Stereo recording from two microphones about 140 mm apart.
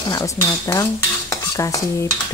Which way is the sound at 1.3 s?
25° left (ahead or behind).